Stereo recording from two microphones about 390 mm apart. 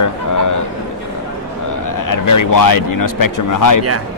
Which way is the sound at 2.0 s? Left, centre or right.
Left.